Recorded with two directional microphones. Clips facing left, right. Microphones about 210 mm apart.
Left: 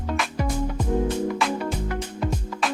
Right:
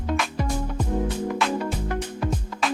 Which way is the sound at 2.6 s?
Centre (ahead or behind).